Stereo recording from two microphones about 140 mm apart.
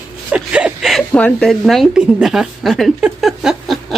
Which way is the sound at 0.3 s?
10° right (ahead or behind).